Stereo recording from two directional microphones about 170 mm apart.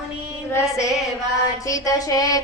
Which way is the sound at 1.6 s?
20° left (ahead or behind).